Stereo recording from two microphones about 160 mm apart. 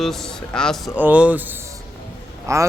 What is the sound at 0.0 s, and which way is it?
Speech, centre (ahead or behind).